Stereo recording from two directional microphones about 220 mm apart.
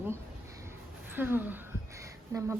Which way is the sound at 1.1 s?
10° right (ahead or behind).